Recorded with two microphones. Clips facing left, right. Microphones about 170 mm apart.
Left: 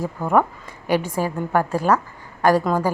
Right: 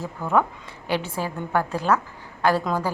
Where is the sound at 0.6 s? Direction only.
45° left (ahead or behind).